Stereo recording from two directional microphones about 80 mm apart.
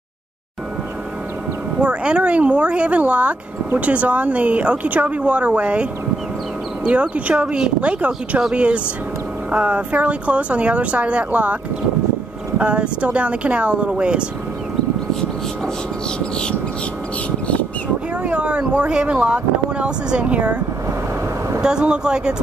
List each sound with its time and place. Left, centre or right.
1.8 s speech: centre
12.5 s speech: centre
18.2 s speech: centre